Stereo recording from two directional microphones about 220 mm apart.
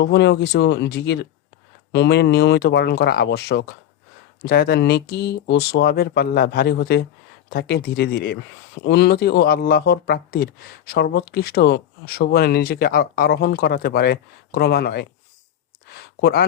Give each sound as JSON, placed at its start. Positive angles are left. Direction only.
{"t": 0.0, "sound": "speech", "side_deg": 50}